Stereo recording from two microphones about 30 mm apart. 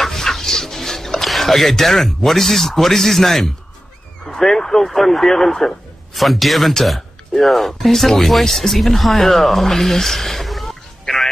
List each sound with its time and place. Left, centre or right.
0.0 s chicken: centre
1.3 s speech: centre
4.6 s speech: centre
4.8 s speech: centre